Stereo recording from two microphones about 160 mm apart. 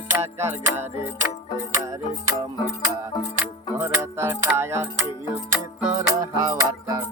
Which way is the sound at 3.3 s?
15° right (ahead or behind).